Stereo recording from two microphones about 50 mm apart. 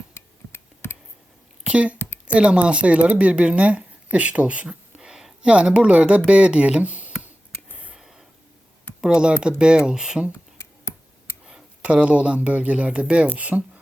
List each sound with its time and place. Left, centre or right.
0.1 s a sound: left
1.6 s a sound: right
2.2 s speech: right
4.9 s speech: centre; by 7.1 s right
9.0 s speech: centre
10.6 s tick: left
11.8 s speech: right